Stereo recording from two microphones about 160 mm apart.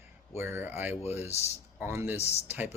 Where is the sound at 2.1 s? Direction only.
40° left (ahead or behind).